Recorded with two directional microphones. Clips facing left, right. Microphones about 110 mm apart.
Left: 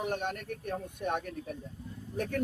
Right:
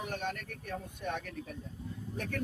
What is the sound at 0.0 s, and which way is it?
Speech, 50° left (ahead or behind).